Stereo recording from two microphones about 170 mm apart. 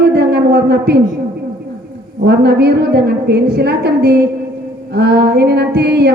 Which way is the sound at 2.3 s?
70° right (ahead or behind).